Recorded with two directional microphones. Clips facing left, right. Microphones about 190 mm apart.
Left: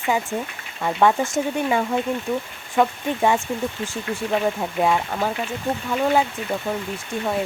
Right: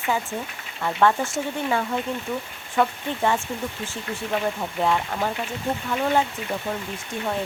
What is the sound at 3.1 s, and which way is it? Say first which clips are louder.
Speech: left 4 dB; 15° left (ahead or behind).